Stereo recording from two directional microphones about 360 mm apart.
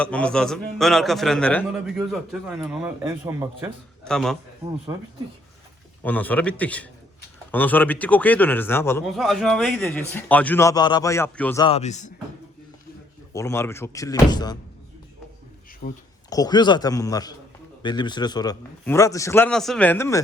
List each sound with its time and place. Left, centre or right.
0.0 s a man's voice: centre
6.0 s a man's voice: centre
13.3 s a man's voice: centre
15.8 s speech: left
16.3 s a man's voice: centre